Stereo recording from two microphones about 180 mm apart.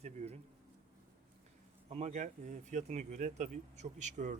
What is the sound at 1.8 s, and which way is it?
Speech, 40° right (ahead or behind).